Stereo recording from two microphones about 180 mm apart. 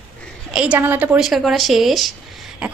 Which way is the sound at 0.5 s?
5° right (ahead or behind).